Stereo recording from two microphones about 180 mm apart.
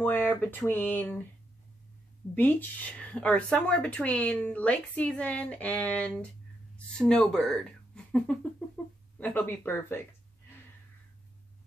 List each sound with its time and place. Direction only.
0.0 s speech: 10° left (ahead or behind)
2.3 s speech: 10° left (ahead or behind)